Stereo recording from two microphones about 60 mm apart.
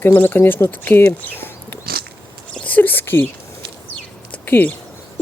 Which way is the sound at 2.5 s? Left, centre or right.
Left.